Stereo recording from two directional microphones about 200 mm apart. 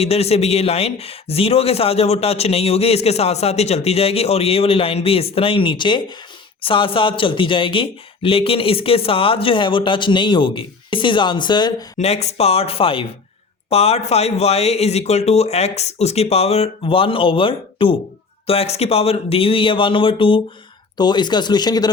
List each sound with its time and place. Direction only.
0.0 s a man's voice: 30° left (ahead or behind)
11.9 s a man's voice: 35° left (ahead or behind)